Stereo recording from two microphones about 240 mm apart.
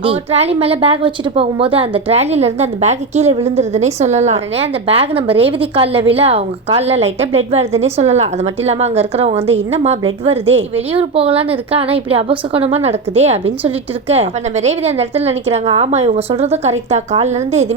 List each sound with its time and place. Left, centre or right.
0.0 s a woman's voice: right